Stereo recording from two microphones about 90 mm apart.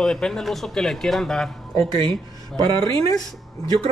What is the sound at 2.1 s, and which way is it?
Speech, 60° right (ahead or behind).